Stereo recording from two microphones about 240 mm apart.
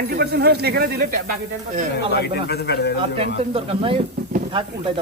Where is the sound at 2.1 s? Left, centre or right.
Left.